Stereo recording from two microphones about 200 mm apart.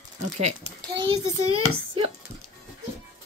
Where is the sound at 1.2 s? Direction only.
90° right.